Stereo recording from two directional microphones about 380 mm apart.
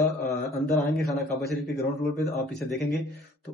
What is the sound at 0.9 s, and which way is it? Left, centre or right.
Speech, centre.